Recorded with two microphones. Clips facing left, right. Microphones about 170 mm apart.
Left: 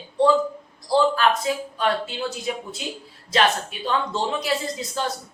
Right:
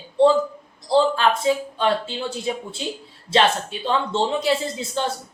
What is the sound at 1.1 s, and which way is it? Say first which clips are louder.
Speech: right 2 dB; 25° right (ahead or behind).